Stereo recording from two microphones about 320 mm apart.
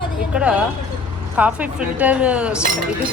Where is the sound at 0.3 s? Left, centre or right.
Centre.